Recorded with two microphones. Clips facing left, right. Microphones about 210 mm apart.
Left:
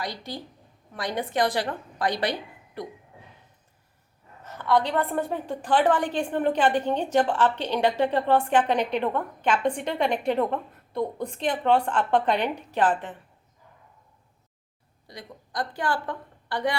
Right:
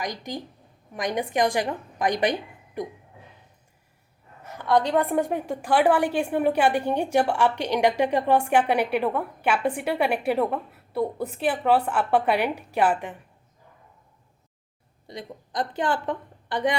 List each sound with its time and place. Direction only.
0.0 s a woman's voice: 15° right (ahead or behind)
4.4 s a woman's voice: 15° right (ahead or behind)
15.0 s a woman's voice: 20° right (ahead or behind)